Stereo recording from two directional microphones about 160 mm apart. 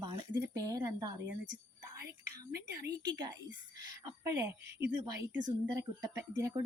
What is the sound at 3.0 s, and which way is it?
Speech, 25° right (ahead or behind).